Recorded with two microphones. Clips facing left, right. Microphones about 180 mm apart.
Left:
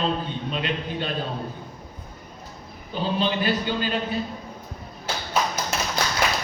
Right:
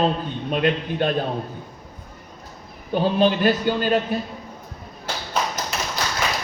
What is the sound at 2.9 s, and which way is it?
A man's voice, 50° right (ahead or behind).